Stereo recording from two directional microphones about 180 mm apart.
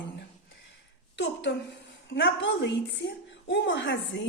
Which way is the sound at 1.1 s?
80° left.